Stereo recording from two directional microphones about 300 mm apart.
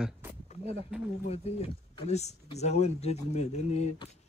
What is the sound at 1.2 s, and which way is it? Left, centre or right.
Speech, left.